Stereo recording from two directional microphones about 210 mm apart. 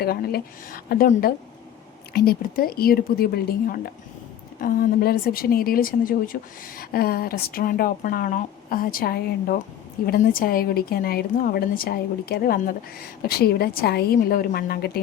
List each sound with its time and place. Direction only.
0.0 s a woman's voice: 45° left (ahead or behind)